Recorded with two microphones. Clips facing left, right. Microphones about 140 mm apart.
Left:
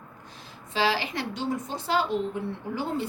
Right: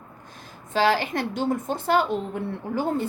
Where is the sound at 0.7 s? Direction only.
50° right (ahead or behind).